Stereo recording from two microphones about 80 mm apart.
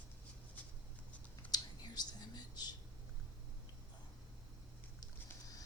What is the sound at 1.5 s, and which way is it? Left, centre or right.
Whispering, left.